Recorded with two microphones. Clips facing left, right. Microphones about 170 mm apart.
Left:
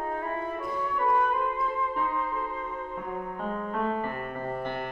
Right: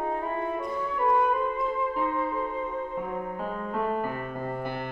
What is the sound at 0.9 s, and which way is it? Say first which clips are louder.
Music: right 2 dB; 20° right (ahead or behind).